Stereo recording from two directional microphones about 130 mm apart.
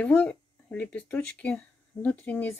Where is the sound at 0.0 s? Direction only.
10° left (ahead or behind).